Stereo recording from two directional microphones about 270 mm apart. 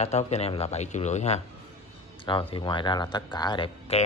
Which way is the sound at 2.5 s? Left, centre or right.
Centre.